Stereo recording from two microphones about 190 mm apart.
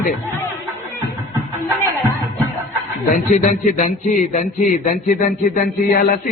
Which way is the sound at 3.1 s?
40° left (ahead or behind).